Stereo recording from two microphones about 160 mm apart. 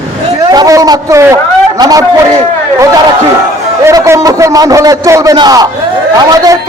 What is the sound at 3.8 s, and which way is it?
A man's voice, 20° right (ahead or behind).